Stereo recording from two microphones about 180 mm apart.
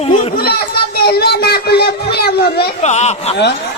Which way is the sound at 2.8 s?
40° left (ahead or behind).